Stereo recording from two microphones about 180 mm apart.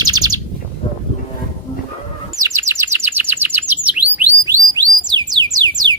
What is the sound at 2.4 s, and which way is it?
Bird, 15° right (ahead or behind).